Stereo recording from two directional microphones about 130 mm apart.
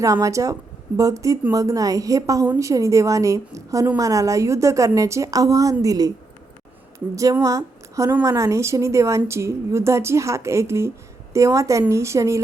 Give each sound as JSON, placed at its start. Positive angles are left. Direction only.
{"t": 0.0, "sound": "a woman's voice", "side_deg": -25}
{"t": 7.2, "sound": "a woman's voice", "side_deg": -25}